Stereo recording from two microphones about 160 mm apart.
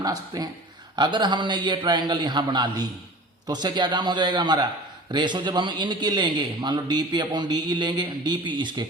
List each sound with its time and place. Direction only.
0.0 s a man's voice: 25° right (ahead or behind)